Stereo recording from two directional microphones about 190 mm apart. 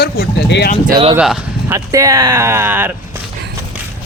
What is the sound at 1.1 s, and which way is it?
Speech, 5° right (ahead or behind).